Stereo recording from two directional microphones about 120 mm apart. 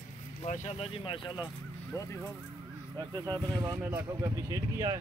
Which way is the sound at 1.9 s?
25° left (ahead or behind).